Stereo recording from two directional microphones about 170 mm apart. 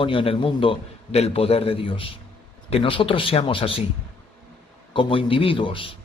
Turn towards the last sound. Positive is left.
turn(degrees=30)  # may be behind; listen again after turning